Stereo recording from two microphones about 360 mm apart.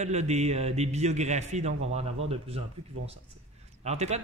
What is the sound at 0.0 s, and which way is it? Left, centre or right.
A man's voice, centre.